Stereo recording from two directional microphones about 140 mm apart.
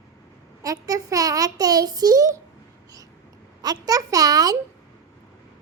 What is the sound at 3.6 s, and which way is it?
A child's voice, 25° right (ahead or behind).